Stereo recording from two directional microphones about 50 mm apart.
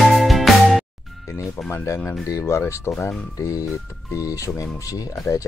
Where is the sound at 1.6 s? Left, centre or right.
Left.